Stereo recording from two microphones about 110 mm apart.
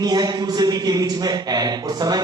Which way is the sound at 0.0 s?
35° right (ahead or behind).